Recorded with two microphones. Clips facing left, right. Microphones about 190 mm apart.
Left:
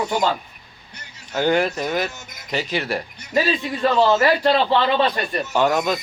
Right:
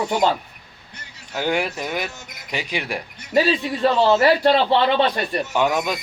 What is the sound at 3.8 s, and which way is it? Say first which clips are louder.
Speech: right 1 dB; 35° right (ahead or behind).